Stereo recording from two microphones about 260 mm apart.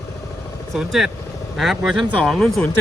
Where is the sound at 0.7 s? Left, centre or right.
Centre.